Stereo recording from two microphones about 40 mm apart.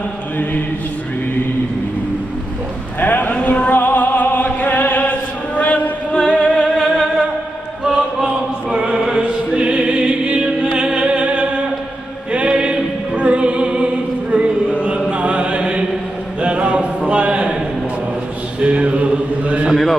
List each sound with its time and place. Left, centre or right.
0.4 s mantra: left
3.0 s a sound: left
3.3 s music: left
3.8 s music: left
6.1 s music: left
6.8 s music: centre
8.2 s chant: centre
9.2 s music: right
14.3 s a sound: right
15.0 s chant: right
16.3 s a sound: right
18.6 s mantra: right
19.7 s a sound: centre